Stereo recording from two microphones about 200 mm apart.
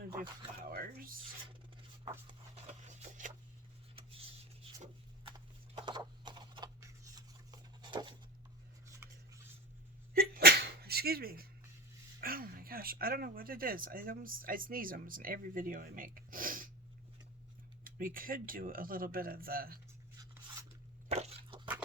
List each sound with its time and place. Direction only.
0.2 s speech: 45° right (ahead or behind)
2.8 s a sound: 35° right (ahead or behind)
5.7 s a sound: 20° right (ahead or behind)
8.9 s rub: 15° right (ahead or behind)
10.2 s sneeze: 50° right (ahead or behind)
12.2 s speech: 45° right (ahead or behind)
17.8 s speech: 45° right (ahead or behind)
21.1 s crunch: 30° right (ahead or behind)